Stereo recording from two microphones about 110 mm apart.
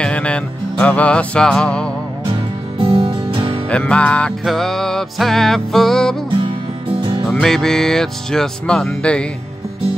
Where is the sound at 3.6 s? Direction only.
10° left (ahead or behind).